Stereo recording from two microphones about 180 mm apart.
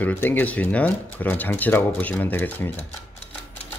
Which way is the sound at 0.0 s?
10° left (ahead or behind).